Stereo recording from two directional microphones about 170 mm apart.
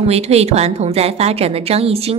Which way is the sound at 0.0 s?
35° right (ahead or behind).